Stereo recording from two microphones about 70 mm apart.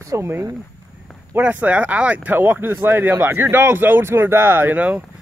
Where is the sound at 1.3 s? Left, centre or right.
Right.